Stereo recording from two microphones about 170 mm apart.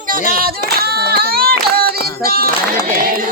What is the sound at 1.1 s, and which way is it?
Child singing, 65° right (ahead or behind).